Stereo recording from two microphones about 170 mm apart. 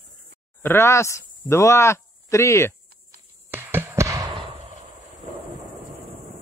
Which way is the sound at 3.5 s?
10° right (ahead or behind).